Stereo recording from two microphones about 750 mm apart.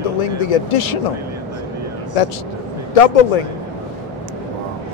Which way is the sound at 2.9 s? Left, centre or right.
Left.